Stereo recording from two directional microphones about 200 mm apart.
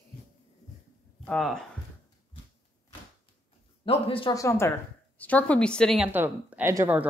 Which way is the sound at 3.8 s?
25° left (ahead or behind).